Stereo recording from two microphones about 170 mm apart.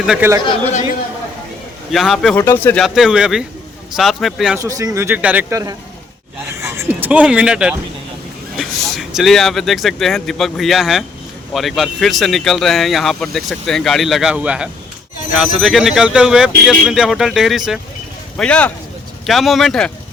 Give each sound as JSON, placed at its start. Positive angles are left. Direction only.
{"t": 0.0, "sound": "speech", "side_deg": -5}
{"t": 1.9, "sound": "speech", "side_deg": 0}
{"t": 2.8, "sound": "speech", "side_deg": 0}
{"t": 4.5, "sound": "speech", "side_deg": -20}
{"t": 6.6, "sound": "music", "side_deg": -15}
{"t": 8.5, "sound": "speech", "side_deg": 0}